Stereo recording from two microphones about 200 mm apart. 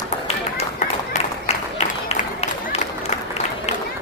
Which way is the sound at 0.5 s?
35° left (ahead or behind).